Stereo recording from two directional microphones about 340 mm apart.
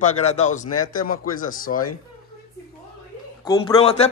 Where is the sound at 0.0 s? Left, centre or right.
Centre.